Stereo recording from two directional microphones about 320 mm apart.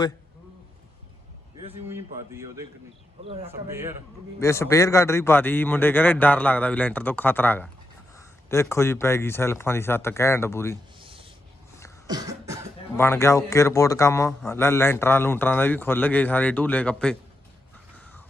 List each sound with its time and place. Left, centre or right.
1.6 s speech: centre
4.4 s a man's voice: centre
11.0 s a sound: centre
12.0 s cough: centre
13.0 s a man's voice: centre